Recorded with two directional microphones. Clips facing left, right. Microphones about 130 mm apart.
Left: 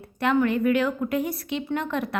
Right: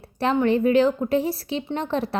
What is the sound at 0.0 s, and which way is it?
A child's voice, 30° right (ahead or behind).